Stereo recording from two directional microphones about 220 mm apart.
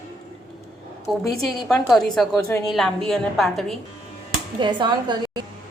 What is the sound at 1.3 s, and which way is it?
Speech, centre (ahead or behind).